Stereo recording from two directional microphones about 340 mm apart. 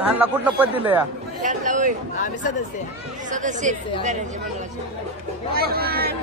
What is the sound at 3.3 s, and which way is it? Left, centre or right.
Speech, right.